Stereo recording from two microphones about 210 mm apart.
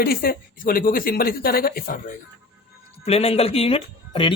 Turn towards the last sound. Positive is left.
turn(degrees=25)  # may be behind; listen again after turning